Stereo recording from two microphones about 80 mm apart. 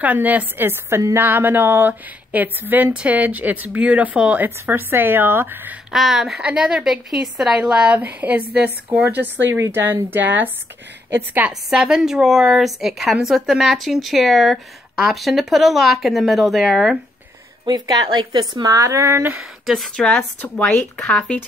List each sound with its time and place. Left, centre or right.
0.0 s speech: right
5.9 s a woman's voice: centre
9.0 s speech: right
11.7 s speech: centre
17.6 s speech: right
19.6 s a woman's voice: centre
20.0 s a woman's voice: centre